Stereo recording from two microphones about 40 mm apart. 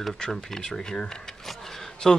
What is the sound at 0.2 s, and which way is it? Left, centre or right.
Speech, centre.